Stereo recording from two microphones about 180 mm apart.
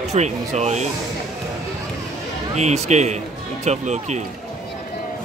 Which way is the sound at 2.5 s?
40° right (ahead or behind).